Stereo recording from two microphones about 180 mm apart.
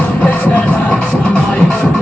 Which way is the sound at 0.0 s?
10° left (ahead or behind).